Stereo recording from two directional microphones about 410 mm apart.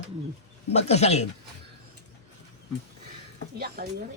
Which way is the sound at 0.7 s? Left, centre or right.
Centre.